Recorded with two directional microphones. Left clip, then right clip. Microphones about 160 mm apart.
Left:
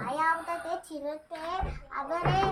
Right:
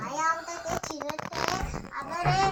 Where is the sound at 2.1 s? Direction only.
5° left (ahead or behind).